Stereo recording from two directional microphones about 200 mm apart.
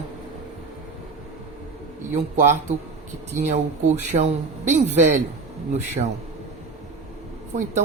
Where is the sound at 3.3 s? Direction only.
35° right (ahead or behind).